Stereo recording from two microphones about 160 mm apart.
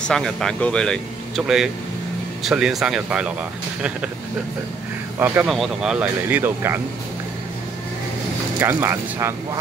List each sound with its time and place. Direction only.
0.0 s speech: 5° left (ahead or behind)
5.2 s speech: 15° right (ahead or behind)
5.5 s speech: 5° right (ahead or behind)
8.5 s speech: 15° right (ahead or behind)